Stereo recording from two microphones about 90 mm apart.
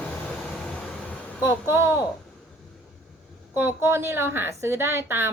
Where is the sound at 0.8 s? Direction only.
10° left (ahead or behind).